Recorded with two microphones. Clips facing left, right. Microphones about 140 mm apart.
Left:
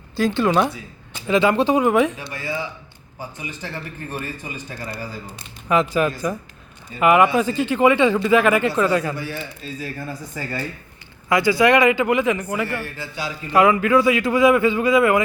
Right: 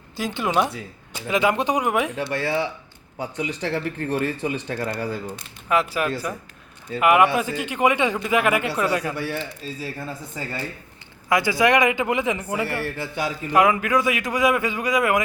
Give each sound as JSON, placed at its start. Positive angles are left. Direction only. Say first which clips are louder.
{"t": 0.3, "sound": "a man's voice", "louder": "left 3 dB", "side_deg": -10}
{"t": 2.1, "sound": "speech", "louder": "right 5 dB", "side_deg": -70}
{"t": 5.6, "sound": "a man's voice", "louder": "left 3 dB", "side_deg": -5}
{"t": 9.1, "sound": "a man's voice", "louder": "right 2 dB", "side_deg": -65}
{"t": 11.3, "sound": "speech", "louder": "left 3 dB", "side_deg": -20}
{"t": 12.8, "sound": "a man's voice", "louder": "right 3 dB", "side_deg": -60}
{"t": 13.5, "sound": "a man's voice", "louder": "left 4 dB", "side_deg": -15}